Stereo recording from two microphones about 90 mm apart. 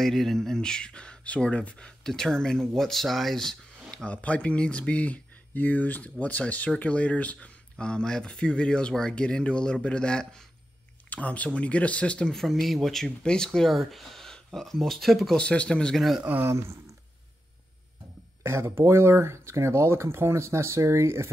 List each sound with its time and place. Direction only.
0.0 s speech: 5° left (ahead or behind)
15.4 s speech: 10° left (ahead or behind)
16.2 s speech: 20° right (ahead or behind)
18.4 s speech: 30° right (ahead or behind)